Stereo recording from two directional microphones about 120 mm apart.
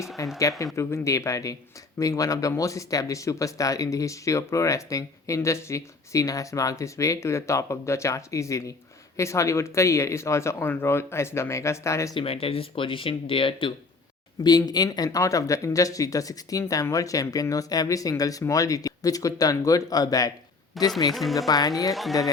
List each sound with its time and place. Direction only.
0.2 s speech: 30° left (ahead or behind)
12.1 s speech: 50° left (ahead or behind)
14.4 s speech: 35° left (ahead or behind)
20.8 s speech: centre (ahead or behind)
21.3 s speech: 30° left (ahead or behind)